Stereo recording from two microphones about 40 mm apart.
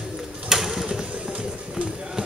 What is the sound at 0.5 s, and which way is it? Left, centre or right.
Bird, centre.